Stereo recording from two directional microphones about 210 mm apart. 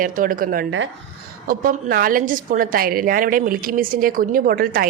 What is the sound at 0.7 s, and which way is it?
Speech, 65° right (ahead or behind).